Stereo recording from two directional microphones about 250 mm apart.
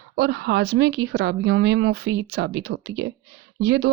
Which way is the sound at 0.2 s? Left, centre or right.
Right.